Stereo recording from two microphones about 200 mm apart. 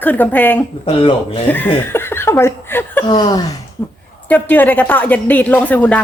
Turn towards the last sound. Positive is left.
turn(degrees=5)  # may be behind; listen again after turning